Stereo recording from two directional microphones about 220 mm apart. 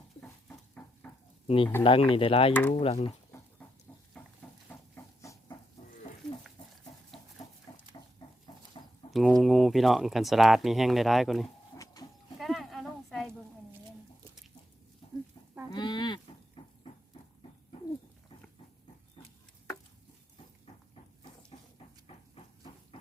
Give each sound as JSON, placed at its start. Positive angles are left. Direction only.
{"t": 0.2, "sound": "a sound", "side_deg": 5}
{"t": 1.0, "sound": "stir", "side_deg": 10}
{"t": 1.5, "sound": "speech", "side_deg": 25}
{"t": 2.5, "sound": "speech", "side_deg": 10}
{"t": 2.7, "sound": "speech", "side_deg": 25}
{"t": 4.7, "sound": "a sound", "side_deg": 15}
{"t": 6.6, "sound": "chicken", "side_deg": 20}
{"t": 7.4, "sound": "a sound", "side_deg": 15}
{"t": 8.2, "sound": "chicken", "side_deg": 20}
{"t": 9.1, "sound": "speech", "side_deg": 0}
{"t": 12.4, "sound": "a sound", "side_deg": 0}
{"t": 15.7, "sound": "livestock", "side_deg": 20}
{"t": 21.5, "sound": "dog", "side_deg": 25}